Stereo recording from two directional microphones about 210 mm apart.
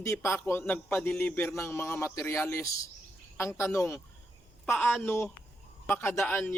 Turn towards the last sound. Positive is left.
turn(degrees=10)  # may be behind; listen again after turning